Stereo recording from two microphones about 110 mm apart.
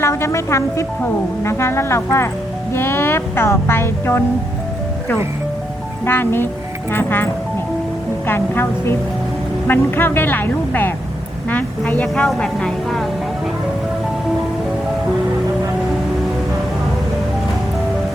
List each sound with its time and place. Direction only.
0.0 s speech: 25° left (ahead or behind)
6.1 s speech: 20° left (ahead or behind)
8.3 s a woman's voice: 20° left (ahead or behind); by 13.1 s 5° left (ahead or behind)